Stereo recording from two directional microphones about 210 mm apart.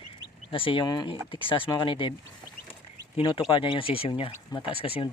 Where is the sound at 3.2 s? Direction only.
20° left (ahead or behind).